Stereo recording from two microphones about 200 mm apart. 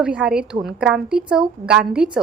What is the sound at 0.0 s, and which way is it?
A woman's voice, 5° right (ahead or behind).